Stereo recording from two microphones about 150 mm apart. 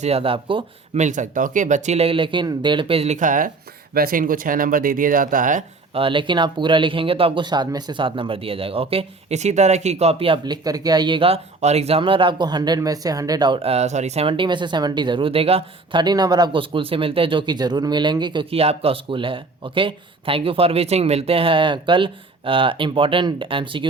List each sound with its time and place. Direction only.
0.0 s speech: 40° right (ahead or behind)
0.9 s speech: 55° right (ahead or behind)
3.9 s speech: 75° right (ahead or behind)
5.9 s speech: 35° right (ahead or behind)